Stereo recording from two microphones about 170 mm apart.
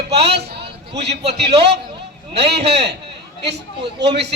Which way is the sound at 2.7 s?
75° right (ahead or behind).